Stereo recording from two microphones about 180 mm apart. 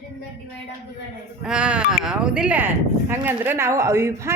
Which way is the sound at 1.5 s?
5° right (ahead or behind).